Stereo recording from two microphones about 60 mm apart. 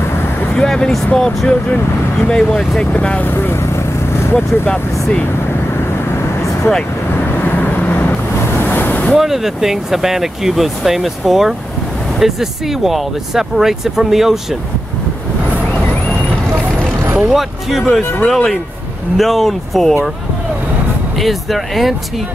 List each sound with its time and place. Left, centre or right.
0.1 s vehicle: left
0.6 s speech: centre
3.3 s vehicle: left
7.3 s vehicle: left
8.5 s waves: left
9.1 s speech: centre
17.3 s speech: centre
21.2 s speech: centre